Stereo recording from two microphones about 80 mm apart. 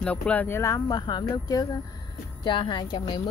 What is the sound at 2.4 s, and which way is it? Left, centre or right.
Speech, left.